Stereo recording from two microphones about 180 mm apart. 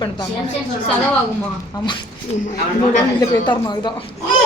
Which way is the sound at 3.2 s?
20° left (ahead or behind).